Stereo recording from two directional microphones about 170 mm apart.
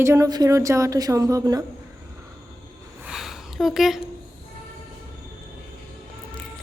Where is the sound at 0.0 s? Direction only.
15° right (ahead or behind).